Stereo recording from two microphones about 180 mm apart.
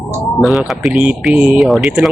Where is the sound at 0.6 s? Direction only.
Centre (ahead or behind).